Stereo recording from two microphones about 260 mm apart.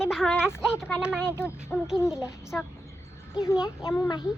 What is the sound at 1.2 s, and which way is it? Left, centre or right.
Speech, centre.